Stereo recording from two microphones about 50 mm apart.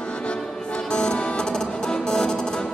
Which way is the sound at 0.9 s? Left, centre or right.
Centre.